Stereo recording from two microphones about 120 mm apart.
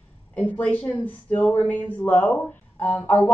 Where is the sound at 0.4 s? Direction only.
15° left (ahead or behind).